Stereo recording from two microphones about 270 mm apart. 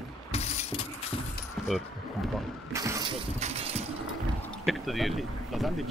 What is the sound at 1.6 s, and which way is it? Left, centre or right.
Keys jangling, centre.